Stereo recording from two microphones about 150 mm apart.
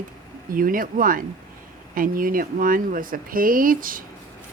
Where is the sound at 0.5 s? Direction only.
65° right (ahead or behind).